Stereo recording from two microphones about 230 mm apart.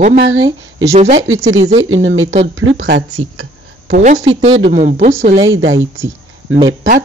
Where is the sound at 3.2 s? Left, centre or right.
Right.